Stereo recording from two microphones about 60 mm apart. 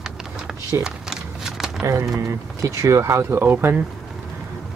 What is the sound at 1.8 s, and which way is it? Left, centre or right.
Speech, right.